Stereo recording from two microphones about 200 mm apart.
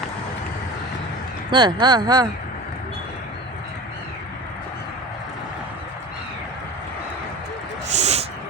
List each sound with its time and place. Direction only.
1.5 s speech: 25° right (ahead or behind)
7.9 s dog: 35° right (ahead or behind)